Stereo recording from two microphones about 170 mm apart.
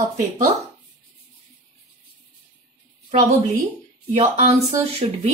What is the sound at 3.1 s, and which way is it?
A woman's voice, 40° right (ahead or behind).